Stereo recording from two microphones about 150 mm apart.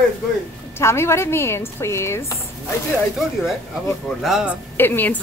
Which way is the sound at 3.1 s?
Centre (ahead or behind).